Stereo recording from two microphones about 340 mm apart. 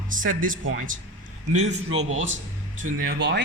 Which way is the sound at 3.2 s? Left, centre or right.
Right.